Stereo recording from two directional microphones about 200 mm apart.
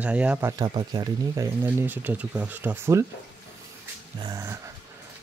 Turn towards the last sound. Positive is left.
turn(degrees=-15)  # may be behind; listen again after turning